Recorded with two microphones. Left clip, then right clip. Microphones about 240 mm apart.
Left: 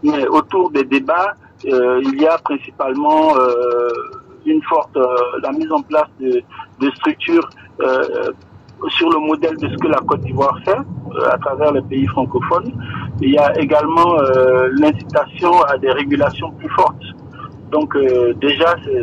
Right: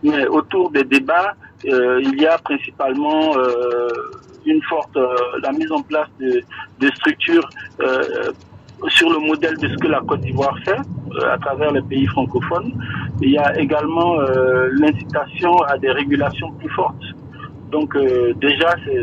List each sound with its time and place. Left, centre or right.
0.1 s speech: left